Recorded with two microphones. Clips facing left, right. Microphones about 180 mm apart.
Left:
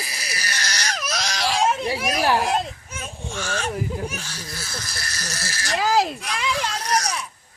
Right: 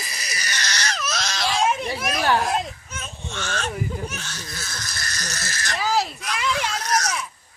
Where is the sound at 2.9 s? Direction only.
10° left (ahead or behind).